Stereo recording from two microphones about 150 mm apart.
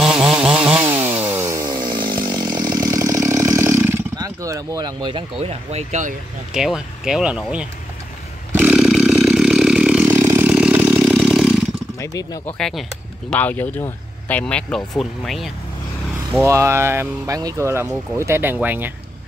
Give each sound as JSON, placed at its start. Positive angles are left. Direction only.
{"t": 0.0, "sound": "chainsaw", "side_deg": -5}
{"t": 5.4, "sound": "speech", "side_deg": -45}
{"t": 6.5, "sound": "speech", "side_deg": -5}
{"t": 8.5, "sound": "chainsaw", "side_deg": -5}
{"t": 12.0, "sound": "speech", "side_deg": 20}
{"t": 12.5, "sound": "speech", "side_deg": 5}
{"t": 16.3, "sound": "speech", "side_deg": -20}